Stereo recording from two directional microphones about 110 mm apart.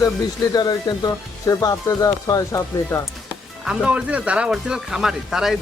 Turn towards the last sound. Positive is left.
turn(degrees=-5)  # may be behind; listen again after turning